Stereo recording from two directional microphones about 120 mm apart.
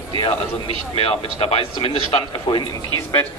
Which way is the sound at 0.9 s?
55° left (ahead or behind).